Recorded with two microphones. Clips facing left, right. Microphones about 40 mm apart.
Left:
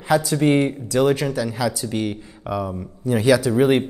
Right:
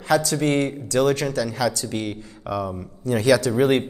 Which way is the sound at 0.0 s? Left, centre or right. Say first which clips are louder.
Left 2 dB; centre.